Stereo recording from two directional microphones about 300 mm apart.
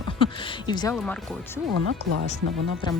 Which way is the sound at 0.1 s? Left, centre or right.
Centre.